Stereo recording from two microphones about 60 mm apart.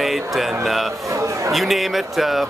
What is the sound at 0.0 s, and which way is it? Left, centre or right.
Mantra, centre.